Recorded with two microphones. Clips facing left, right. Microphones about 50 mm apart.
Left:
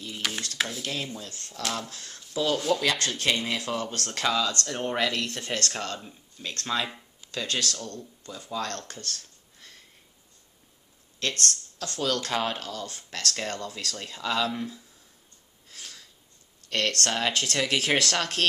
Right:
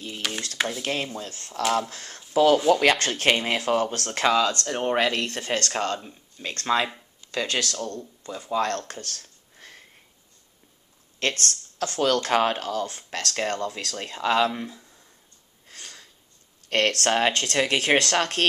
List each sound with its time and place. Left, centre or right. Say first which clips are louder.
0.2 s a sound: right 1 dB; centre
0.6 s dishes: right 4 dB; centre
0.8 s speech: right 5 dB; right
2.7 s speech: right 6 dB; right
3.3 s speech: right 6 dB; right
5.9 s speech: right 3 dB; centre
6.4 s speech: right 6 dB; right
9.6 s sniff: right 5 dB; right
11.2 s speech: right 3 dB; right
14.5 s speech: even; centre
15.8 s sniff: right 1 dB; centre
16.6 s speech: right 5 dB; right
17.6 s speech: right 4 dB; centre